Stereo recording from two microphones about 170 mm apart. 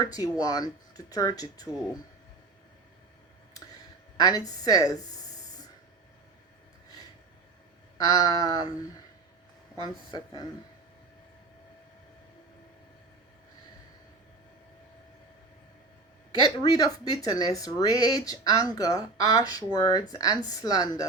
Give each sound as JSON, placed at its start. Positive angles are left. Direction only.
{"t": 0.0, "sound": "speech", "side_deg": 20}
{"t": 4.2, "sound": "speech", "side_deg": 20}
{"t": 7.9, "sound": "speech", "side_deg": 20}
{"t": 9.8, "sound": "speech", "side_deg": 20}
{"t": 16.7, "sound": "speech", "side_deg": 20}